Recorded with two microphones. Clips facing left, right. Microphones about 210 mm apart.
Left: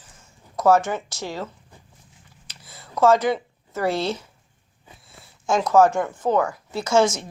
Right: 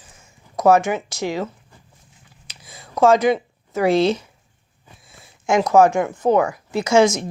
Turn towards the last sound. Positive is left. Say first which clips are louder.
# right 4 dB
turn(degrees=-15)  # may be behind; listen again after turning